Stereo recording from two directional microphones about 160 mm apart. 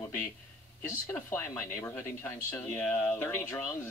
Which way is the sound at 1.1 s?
15° left (ahead or behind).